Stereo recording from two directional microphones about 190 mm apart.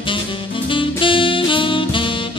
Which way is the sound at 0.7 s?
25° left (ahead or behind).